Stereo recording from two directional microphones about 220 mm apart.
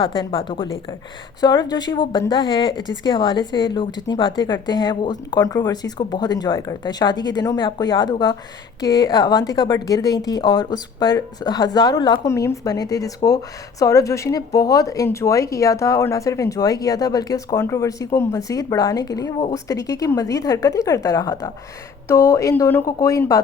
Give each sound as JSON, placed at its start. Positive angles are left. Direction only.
{"t": 0.0, "sound": "a woman's voice", "side_deg": 25}